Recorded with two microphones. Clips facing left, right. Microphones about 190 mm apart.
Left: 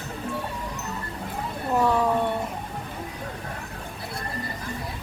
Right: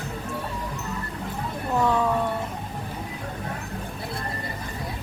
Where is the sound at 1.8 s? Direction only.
10° left (ahead or behind).